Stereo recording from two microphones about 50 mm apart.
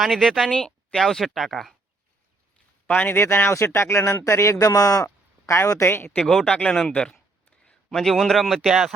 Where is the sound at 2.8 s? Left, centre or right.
Left.